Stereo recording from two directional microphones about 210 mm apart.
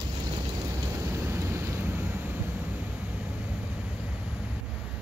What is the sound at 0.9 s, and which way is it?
Vehicle, 10° right (ahead or behind).